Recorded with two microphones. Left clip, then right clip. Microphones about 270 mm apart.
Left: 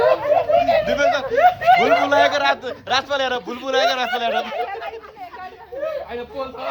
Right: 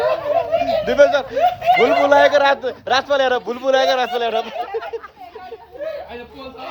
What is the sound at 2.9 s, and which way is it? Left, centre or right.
A man's voice, centre.